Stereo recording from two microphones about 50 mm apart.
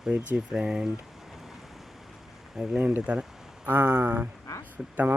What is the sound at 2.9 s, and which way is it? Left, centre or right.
Speech, right.